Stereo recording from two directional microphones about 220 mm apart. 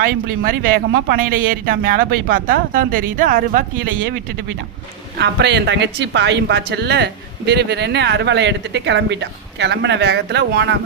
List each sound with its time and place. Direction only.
0.0 s speech: 40° right (ahead or behind)
5.1 s a woman's voice: 50° right (ahead or behind)